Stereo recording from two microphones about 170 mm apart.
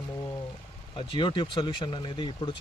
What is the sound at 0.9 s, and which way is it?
Speech, 25° left (ahead or behind).